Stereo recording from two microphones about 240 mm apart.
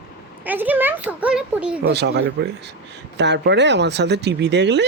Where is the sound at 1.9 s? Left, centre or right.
Right.